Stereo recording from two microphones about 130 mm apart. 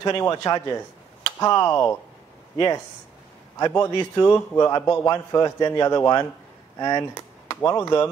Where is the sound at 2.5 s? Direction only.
30° left (ahead or behind).